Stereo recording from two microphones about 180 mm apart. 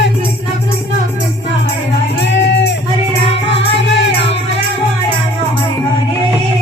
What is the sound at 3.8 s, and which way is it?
Music, 80° left.